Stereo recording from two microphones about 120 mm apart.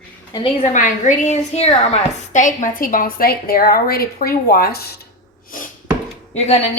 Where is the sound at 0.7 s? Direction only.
90° left.